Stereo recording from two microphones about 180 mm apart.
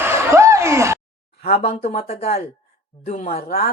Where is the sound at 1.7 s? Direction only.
35° left (ahead or behind).